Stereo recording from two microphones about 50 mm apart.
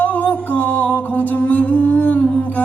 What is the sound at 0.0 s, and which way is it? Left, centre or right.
Music, left.